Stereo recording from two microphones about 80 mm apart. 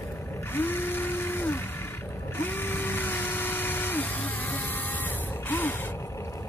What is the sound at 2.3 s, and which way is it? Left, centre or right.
Drill, left.